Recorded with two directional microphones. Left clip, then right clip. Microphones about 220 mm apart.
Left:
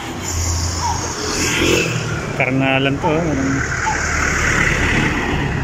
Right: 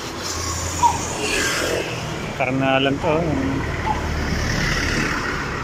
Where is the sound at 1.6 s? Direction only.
50° left (ahead or behind).